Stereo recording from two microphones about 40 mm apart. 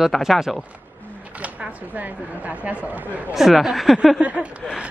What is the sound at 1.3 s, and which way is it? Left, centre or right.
Speech, right.